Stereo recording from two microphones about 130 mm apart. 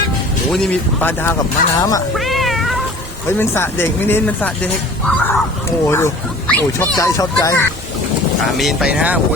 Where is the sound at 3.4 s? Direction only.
20° left (ahead or behind).